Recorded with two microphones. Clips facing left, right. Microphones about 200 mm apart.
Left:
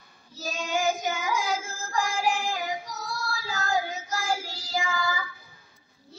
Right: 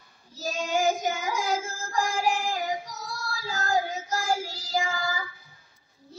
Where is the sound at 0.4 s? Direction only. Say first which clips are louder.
Right 2 dB; 40° right (ahead or behind).